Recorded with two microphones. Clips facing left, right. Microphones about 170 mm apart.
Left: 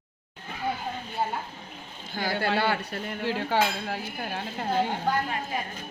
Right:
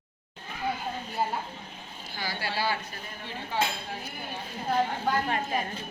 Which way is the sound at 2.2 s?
55° left (ahead or behind).